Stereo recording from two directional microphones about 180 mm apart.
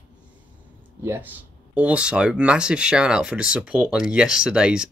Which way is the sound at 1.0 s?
10° right (ahead or behind).